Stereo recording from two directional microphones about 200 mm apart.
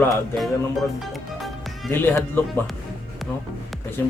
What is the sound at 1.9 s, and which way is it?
Speech, 10° left (ahead or behind).